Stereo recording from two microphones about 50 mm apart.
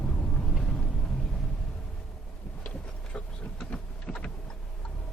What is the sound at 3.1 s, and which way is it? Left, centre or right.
Vehicle, left.